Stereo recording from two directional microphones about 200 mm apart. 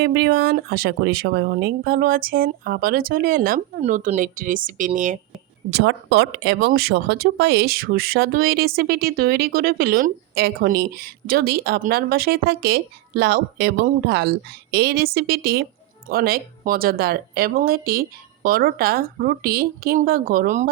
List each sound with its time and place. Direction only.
0.0 s speech: 50° right (ahead or behind); by 5.2 s 35° right (ahead or behind)
5.8 s speech: 60° right (ahead or behind); by 20.7 s 45° right (ahead or behind)